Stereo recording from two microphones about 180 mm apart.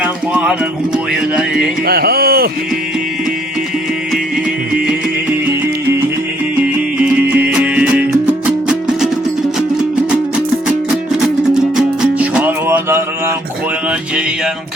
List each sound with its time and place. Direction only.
0.0 s music: 5° right (ahead or behind)
1.9 s speech: 60° right (ahead or behind)
7.0 s music: 10° right (ahead or behind)
11.5 s music: 5° right (ahead or behind)